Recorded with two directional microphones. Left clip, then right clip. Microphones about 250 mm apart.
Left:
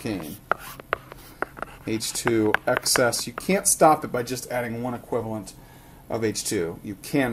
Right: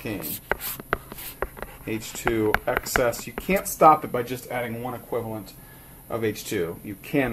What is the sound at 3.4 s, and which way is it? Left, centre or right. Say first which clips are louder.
Speech: right 1 dB; left.